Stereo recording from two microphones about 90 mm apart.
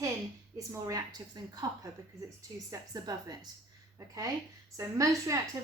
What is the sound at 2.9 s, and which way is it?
Speech, 45° right (ahead or behind).